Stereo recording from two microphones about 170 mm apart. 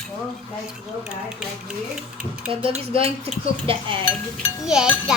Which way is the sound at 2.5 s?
30° right (ahead or behind).